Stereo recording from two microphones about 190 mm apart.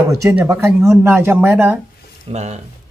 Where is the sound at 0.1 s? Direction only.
15° right (ahead or behind).